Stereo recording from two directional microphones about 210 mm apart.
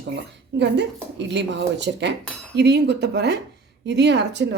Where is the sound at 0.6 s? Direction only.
55° right (ahead or behind).